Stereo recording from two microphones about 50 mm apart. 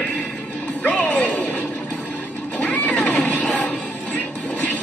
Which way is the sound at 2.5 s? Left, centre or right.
Left.